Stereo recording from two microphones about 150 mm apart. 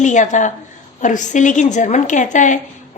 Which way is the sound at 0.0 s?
55° left (ahead or behind).